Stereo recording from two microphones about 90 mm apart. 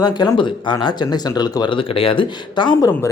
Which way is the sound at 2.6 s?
55° left (ahead or behind).